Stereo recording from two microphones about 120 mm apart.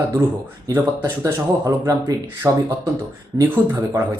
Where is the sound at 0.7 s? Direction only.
20° right (ahead or behind).